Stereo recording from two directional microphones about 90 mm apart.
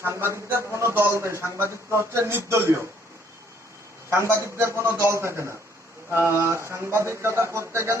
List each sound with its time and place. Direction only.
0.0 s a man's voice: 25° right (ahead or behind)
4.1 s a man's voice: 30° right (ahead or behind)